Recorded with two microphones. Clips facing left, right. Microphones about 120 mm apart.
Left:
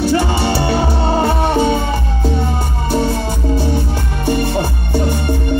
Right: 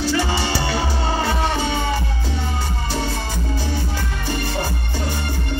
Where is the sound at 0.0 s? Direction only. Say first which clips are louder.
Left 6 dB; 55° left (ahead or behind).